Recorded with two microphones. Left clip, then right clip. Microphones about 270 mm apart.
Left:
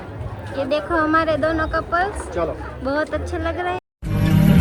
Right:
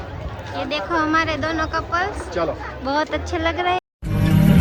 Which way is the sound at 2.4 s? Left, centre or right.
Right.